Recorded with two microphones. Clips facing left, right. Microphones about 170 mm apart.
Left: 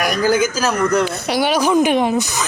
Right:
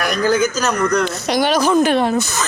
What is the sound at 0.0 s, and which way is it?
Speech, 10° left (ahead or behind).